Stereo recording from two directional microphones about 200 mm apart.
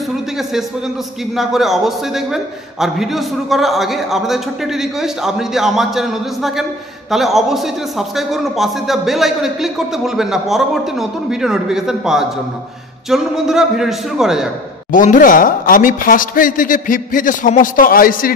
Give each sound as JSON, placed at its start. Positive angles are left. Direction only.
{"t": 0.4, "sound": "a sound", "side_deg": 0}
{"t": 1.3, "sound": "a man's voice", "side_deg": 0}
{"t": 14.9, "sound": "speech", "side_deg": 40}